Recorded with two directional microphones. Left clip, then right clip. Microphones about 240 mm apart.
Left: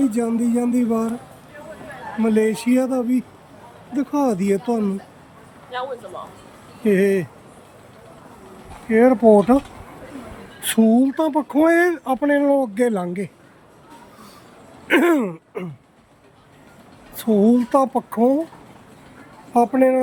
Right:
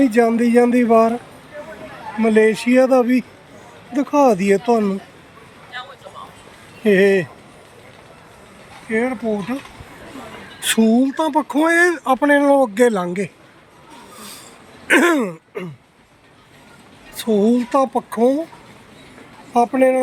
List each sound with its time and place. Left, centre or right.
0.0 s speech: centre
2.2 s speech: centre
5.7 s speech: left
6.8 s speech: centre
8.9 s speech: left
10.6 s speech: centre
14.8 s a sound: centre
17.2 s speech: centre
19.5 s speech: centre